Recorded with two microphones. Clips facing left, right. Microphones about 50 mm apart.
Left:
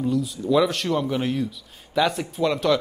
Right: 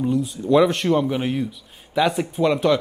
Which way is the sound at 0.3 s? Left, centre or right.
Centre.